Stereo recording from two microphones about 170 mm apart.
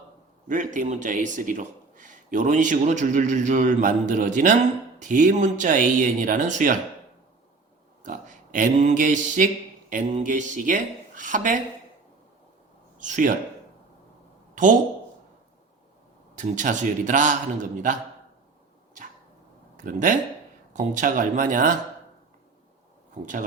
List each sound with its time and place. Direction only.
0.4 s a man's voice: 50° right (ahead or behind)
8.0 s a sound: 50° right (ahead or behind)
9.9 s a man's voice: 45° right (ahead or behind)
13.0 s a man's voice: 50° right (ahead or behind)
14.5 s speech: 50° right (ahead or behind)
16.3 s a man's voice: 45° right (ahead or behind)
19.7 s a man's voice: 50° right (ahead or behind)